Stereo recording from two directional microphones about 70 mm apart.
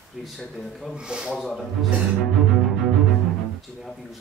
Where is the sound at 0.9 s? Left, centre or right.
Centre.